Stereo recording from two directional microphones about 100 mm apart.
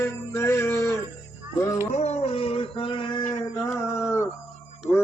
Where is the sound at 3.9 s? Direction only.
25° left (ahead or behind).